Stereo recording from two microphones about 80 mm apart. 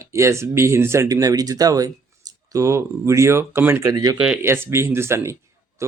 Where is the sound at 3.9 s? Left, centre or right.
Right.